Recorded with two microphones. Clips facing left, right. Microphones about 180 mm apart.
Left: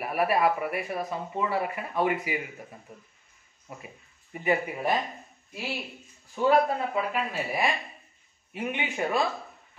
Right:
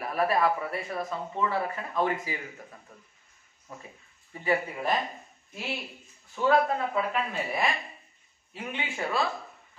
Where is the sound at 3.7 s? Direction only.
15° left (ahead or behind).